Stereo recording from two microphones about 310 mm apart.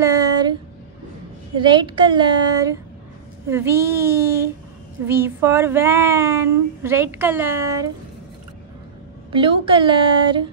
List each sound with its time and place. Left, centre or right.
0.0 s a sound: centre
1.6 s speech: centre
9.3 s speech: centre